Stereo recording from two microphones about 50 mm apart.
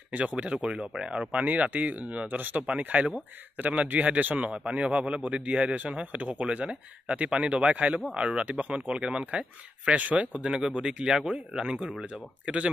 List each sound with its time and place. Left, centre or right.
0.1 s a man's voice: right
0.6 s speech: centre
1.3 s a man's voice: right
8.8 s a man's voice: centre
10.3 s a man's voice: centre